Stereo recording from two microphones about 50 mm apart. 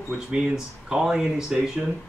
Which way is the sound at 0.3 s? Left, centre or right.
Right.